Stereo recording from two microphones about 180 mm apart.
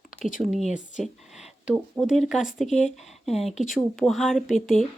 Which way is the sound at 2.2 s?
Centre (ahead or behind).